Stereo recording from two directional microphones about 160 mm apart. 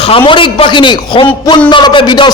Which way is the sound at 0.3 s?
30° left (ahead or behind).